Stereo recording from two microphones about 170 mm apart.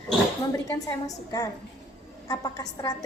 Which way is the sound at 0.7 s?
20° left (ahead or behind).